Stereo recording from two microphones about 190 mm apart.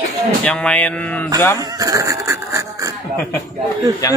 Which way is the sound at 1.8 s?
15° right (ahead or behind).